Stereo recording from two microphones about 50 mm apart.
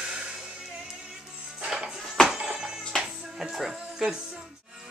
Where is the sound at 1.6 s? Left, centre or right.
Centre.